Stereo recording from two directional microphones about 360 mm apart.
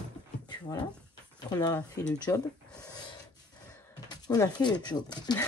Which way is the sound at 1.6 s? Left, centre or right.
Centre.